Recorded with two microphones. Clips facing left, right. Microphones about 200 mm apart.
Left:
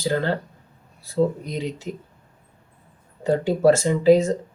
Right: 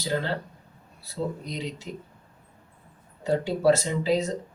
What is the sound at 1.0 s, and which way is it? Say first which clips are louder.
Speech: left 9 dB; 50° left (ahead or behind).